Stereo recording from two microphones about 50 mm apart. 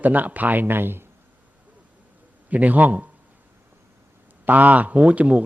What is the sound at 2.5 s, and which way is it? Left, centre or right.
Speech, right.